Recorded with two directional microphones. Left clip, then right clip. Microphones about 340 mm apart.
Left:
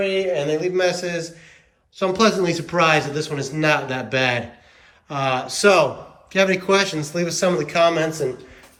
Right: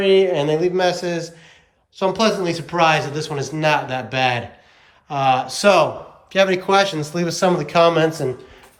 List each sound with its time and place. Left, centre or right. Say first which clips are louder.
0.3 s speech: right 2 dB; centre
7.9 s speech: right 3 dB; right